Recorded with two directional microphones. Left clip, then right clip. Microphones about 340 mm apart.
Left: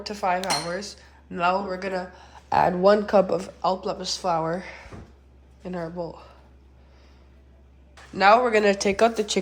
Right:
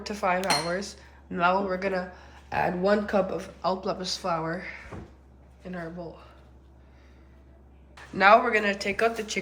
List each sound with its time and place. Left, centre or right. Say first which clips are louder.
0.0 s speech: left 2 dB; centre
2.5 s a man's voice: left 6 dB; centre
8.1 s a man's voice: left 2 dB; centre